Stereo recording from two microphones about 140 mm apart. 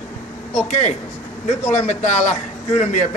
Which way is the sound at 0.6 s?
55° left (ahead or behind).